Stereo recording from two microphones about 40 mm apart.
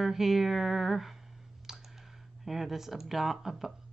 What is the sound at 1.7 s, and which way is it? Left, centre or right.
Clicking, centre.